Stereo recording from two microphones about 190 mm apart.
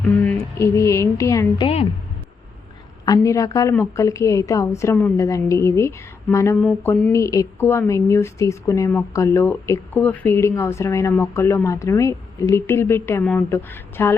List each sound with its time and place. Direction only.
0.3 s speech: 15° left (ahead or behind)
1.6 s a woman's voice: 30° left (ahead or behind)
3.1 s speech: 15° left (ahead or behind)